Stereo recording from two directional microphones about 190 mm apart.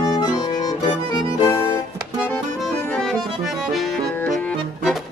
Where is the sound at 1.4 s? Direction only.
25° left (ahead or behind).